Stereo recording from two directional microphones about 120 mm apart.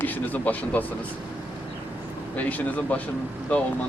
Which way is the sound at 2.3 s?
15° left (ahead or behind).